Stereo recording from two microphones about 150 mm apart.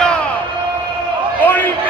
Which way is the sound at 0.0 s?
10° left (ahead or behind).